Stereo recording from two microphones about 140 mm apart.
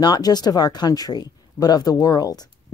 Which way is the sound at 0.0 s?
30° left (ahead or behind).